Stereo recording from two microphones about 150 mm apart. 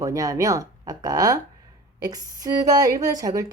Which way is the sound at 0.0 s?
20° right (ahead or behind).